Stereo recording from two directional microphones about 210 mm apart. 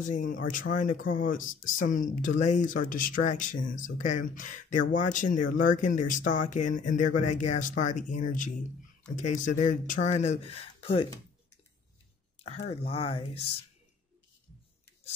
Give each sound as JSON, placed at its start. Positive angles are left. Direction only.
{"t": 0.0, "sound": "speech", "side_deg": 35}
{"t": 12.4, "sound": "speech", "side_deg": 30}